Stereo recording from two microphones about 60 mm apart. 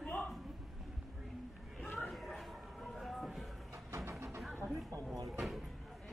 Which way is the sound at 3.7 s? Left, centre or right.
Right.